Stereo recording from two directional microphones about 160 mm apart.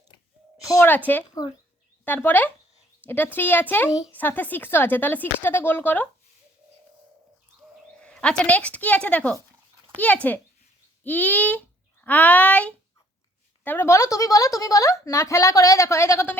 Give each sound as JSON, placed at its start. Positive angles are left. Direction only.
{"t": 0.7, "sound": "speech", "side_deg": 15}
{"t": 8.0, "sound": "a woman's voice", "side_deg": 5}